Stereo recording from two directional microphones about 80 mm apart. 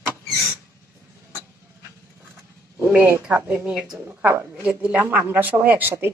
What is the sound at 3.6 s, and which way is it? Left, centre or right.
Speech, centre.